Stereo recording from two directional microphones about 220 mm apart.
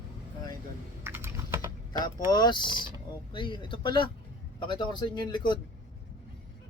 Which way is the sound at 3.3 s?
20° left (ahead or behind).